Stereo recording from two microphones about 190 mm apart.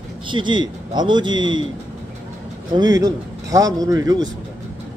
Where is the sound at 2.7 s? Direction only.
20° right (ahead or behind).